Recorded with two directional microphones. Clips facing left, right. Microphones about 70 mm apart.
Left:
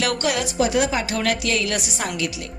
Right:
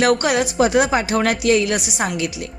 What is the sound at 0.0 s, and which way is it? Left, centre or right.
Speech, right.